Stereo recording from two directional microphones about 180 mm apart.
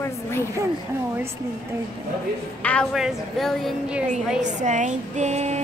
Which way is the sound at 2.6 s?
5° left (ahead or behind).